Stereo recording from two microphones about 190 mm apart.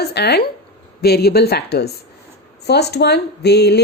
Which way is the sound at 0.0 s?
60° left (ahead or behind).